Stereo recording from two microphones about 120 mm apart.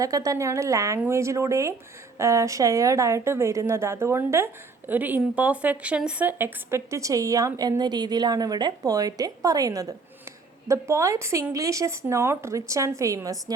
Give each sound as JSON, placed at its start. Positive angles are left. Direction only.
{"t": 0.0, "sound": "a woman's voice", "side_deg": -30}